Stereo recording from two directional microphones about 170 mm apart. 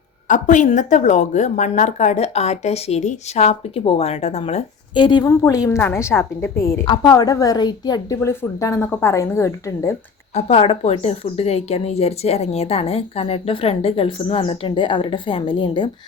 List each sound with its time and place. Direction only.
0.3 s a woman's voice: 45° left (ahead or behind); by 6.8 s 15° left (ahead or behind)
6.8 s a woman's voice: 30° left (ahead or behind)
10.3 s a woman's voice: 35° left (ahead or behind)